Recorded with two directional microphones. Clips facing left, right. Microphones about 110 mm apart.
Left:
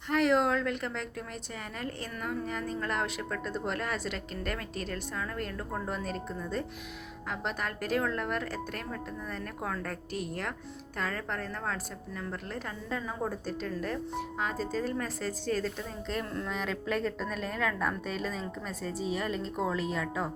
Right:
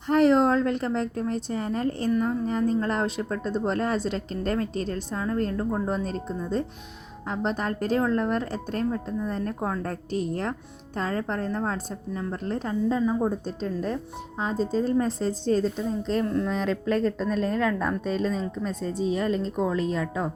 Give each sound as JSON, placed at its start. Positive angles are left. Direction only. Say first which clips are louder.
{"t": 0.1, "sound": "a woman's voice", "louder": "right 7 dB", "side_deg": -35}